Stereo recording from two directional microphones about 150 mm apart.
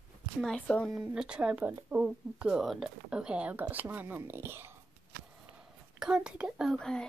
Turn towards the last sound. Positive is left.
turn(degrees=5)  # may be behind; listen again after turning